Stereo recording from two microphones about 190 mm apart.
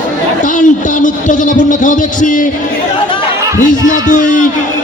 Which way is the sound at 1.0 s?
40° left (ahead or behind).